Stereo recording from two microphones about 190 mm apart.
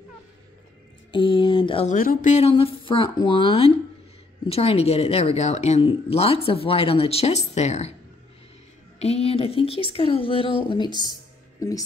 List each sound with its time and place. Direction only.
1.1 s speech: 25° left (ahead or behind)
1.9 s speech: 45° left (ahead or behind)
9.0 s speech: 30° left (ahead or behind)
10.9 s speech: 25° right (ahead or behind)